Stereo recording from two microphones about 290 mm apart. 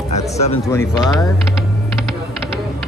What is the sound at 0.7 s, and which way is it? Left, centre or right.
Speech, centre.